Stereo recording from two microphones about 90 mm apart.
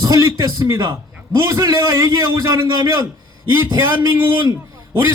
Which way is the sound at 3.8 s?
25° right (ahead or behind).